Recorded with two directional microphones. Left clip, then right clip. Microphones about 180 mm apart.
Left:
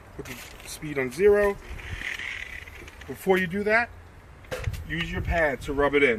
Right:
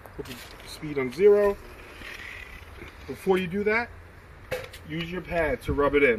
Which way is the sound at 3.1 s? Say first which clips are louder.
Right 1 dB; 15° left (ahead or behind).